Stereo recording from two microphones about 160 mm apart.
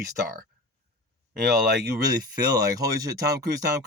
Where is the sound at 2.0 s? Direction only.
25° right (ahead or behind).